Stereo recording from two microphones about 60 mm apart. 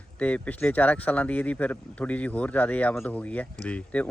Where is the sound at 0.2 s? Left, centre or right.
Left.